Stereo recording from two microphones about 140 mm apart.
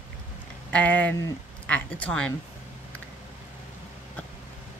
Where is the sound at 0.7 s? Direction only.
10° left (ahead or behind).